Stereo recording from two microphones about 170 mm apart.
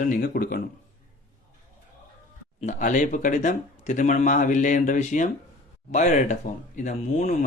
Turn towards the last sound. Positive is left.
turn(degrees=45)  # may be behind; listen again after turning